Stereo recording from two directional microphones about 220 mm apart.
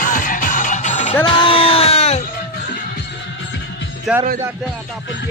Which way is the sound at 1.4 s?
25° left (ahead or behind).